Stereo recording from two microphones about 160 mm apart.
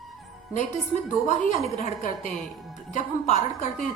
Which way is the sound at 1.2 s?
50° left (ahead or behind).